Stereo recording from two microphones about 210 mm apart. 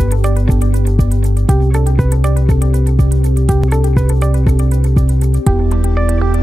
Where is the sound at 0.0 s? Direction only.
Centre (ahead or behind).